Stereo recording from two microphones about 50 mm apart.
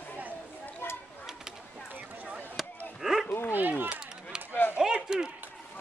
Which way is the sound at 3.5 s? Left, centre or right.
Right.